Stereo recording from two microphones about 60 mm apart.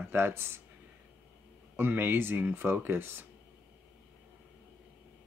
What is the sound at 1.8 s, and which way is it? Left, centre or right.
Speech, right.